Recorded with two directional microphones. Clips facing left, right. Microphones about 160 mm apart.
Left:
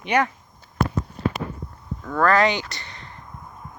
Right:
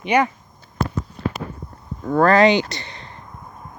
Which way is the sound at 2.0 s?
30° right (ahead or behind).